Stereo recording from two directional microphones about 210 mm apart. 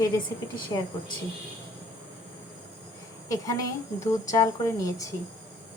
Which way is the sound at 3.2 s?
15° left (ahead or behind).